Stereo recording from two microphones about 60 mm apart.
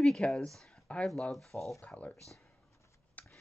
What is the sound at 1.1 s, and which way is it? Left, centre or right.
Speech, centre.